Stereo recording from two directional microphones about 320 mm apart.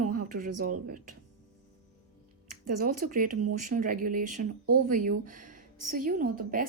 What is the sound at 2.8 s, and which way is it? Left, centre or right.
A woman's voice, right.